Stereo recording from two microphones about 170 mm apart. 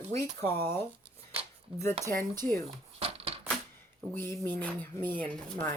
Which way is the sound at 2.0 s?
25° right (ahead or behind).